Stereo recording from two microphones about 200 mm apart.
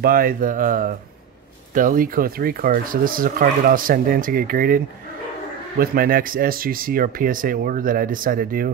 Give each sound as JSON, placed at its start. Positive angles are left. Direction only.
{"t": 0.0, "sound": "speech", "side_deg": -45}